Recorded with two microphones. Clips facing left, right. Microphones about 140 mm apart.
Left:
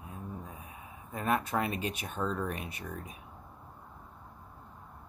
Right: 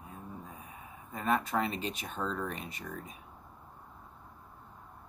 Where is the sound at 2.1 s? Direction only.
10° left (ahead or behind).